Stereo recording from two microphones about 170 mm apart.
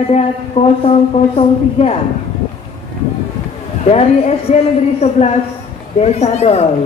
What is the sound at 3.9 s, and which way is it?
A man's voice, 40° left (ahead or behind).